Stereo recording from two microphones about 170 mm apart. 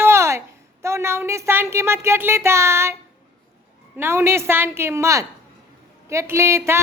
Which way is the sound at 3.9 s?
15° right (ahead or behind).